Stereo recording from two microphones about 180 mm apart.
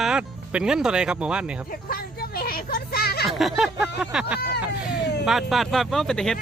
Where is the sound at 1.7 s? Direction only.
55° left (ahead or behind).